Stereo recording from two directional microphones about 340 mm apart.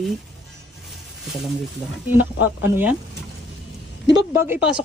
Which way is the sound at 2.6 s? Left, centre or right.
Centre.